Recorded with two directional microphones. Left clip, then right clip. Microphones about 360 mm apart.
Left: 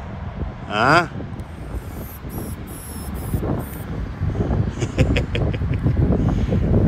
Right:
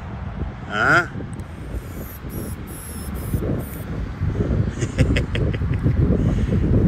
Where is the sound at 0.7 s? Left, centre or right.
Centre.